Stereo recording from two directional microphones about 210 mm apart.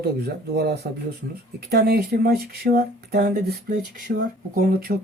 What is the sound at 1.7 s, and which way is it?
Speech, 45° right (ahead or behind).